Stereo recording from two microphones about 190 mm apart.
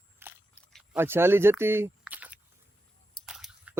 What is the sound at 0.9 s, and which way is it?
Speech, 10° right (ahead or behind).